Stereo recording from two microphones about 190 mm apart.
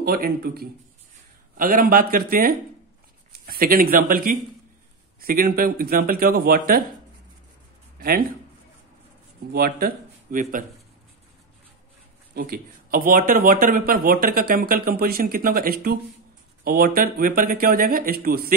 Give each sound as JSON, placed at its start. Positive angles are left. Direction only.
{"t": 0.0, "sound": "speech", "side_deg": -55}
{"t": 8.0, "sound": "speech", "side_deg": -50}
{"t": 9.5, "sound": "speech", "side_deg": -50}
{"t": 12.4, "sound": "speech", "side_deg": -50}